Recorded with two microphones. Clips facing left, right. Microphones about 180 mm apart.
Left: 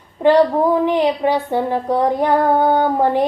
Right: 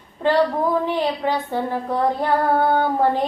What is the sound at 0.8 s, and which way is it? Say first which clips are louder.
Female singing: left 6 dB; 15° left (ahead or behind).